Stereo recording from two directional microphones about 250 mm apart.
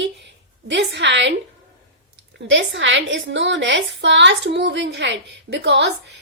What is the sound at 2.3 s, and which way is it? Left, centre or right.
A woman's voice, right.